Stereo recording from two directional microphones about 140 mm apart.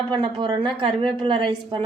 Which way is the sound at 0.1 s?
30° right (ahead or behind).